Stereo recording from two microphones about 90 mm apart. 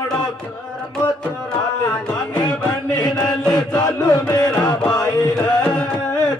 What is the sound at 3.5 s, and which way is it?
Chant, 45° left (ahead or behind).